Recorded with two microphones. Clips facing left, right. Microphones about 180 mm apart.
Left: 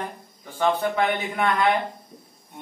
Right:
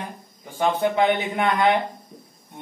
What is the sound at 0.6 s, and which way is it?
Speech, 20° right (ahead or behind).